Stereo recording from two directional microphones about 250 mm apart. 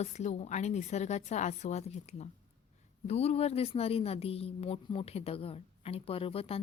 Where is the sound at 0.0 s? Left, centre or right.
Left.